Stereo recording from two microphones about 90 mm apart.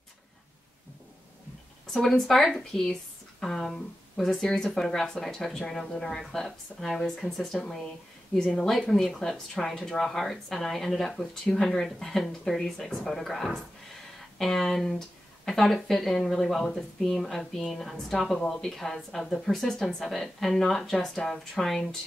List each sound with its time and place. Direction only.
2.0 s speech: 5° left (ahead or behind)